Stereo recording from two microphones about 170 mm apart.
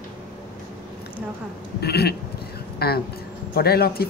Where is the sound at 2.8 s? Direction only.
65° left (ahead or behind).